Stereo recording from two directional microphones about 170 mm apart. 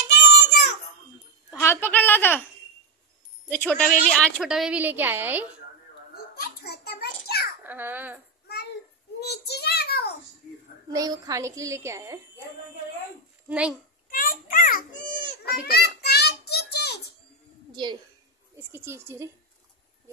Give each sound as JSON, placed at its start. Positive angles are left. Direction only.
{"t": 0.1, "sound": "a sound", "side_deg": 85}
{"t": 1.5, "sound": "a sound", "side_deg": 15}
{"t": 3.5, "sound": "speech", "side_deg": 10}
{"t": 4.1, "sound": "a woman's voice", "side_deg": 0}
{"t": 6.3, "sound": "a sound", "side_deg": 70}
{"t": 7.6, "sound": "a woman's voice", "side_deg": -10}
{"t": 9.3, "sound": "child singing", "side_deg": 75}
{"t": 10.9, "sound": "a woman's voice", "side_deg": -20}
{"t": 13.5, "sound": "a woman's voice", "side_deg": -5}
{"t": 14.1, "sound": "a sound", "side_deg": 55}
{"t": 15.6, "sound": "child singing", "side_deg": 65}
{"t": 17.8, "sound": "a woman's voice", "side_deg": -25}
{"t": 18.7, "sound": "a woman's voice", "side_deg": -15}